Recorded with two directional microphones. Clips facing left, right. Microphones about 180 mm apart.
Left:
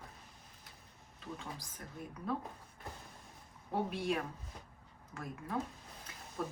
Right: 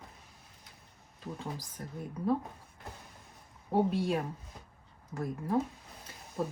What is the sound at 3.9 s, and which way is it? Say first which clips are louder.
Speech: right 5 dB; 30° right (ahead or behind).